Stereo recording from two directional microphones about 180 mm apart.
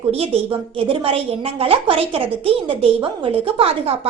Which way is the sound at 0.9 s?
30° right (ahead or behind).